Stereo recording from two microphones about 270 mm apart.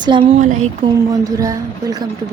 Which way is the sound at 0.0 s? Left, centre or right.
Centre.